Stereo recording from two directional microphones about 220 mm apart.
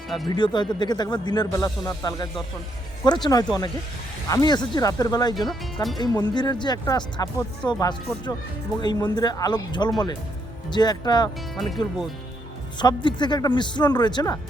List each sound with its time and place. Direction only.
0.3 s speech: 20° left (ahead or behind)
5.5 s speech: centre (ahead or behind)
6.0 s speech: 20° left (ahead or behind)
11.5 s speech: centre (ahead or behind)
12.8 s speech: 20° left (ahead or behind)